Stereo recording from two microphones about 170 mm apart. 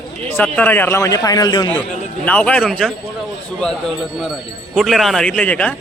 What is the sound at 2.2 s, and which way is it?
A man's voice, 10° left (ahead or behind).